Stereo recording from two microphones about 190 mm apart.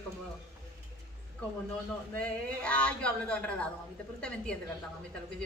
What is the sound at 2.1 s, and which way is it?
Speech, 5° left (ahead or behind).